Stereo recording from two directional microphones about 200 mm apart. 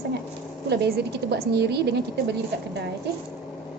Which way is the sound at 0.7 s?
55° right (ahead or behind).